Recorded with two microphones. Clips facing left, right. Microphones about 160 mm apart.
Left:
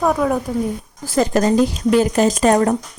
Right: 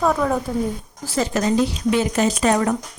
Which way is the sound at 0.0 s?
10° left (ahead or behind).